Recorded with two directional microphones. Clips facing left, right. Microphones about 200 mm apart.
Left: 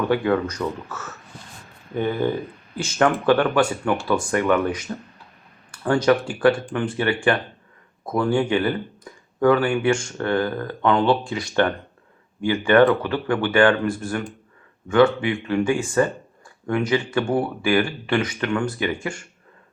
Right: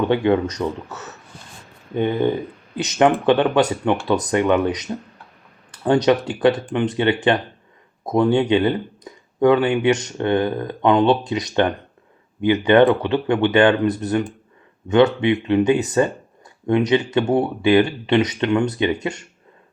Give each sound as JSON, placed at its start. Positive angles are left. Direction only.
{"t": 0.1, "sound": "speech", "side_deg": -25}